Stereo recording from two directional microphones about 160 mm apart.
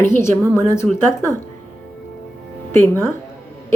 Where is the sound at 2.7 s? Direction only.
15° left (ahead or behind).